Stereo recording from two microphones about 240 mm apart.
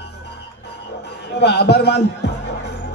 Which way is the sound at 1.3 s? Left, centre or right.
Left.